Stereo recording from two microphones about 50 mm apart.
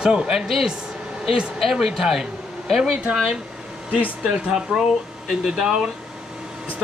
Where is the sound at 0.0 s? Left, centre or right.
Centre.